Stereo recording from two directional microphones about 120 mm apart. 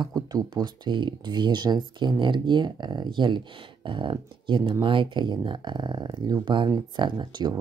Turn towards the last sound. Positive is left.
turn(degrees=-40)  # may be behind; listen again after turning